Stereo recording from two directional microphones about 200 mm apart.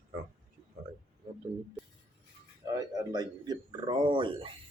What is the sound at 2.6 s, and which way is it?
Speech, 20° right (ahead or behind).